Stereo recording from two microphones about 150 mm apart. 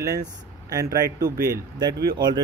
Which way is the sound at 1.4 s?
20° right (ahead or behind).